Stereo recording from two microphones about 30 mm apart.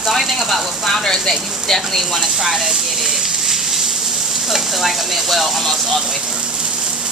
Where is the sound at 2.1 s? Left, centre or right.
Centre.